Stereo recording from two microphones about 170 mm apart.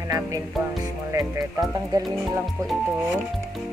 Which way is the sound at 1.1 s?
20° right (ahead or behind).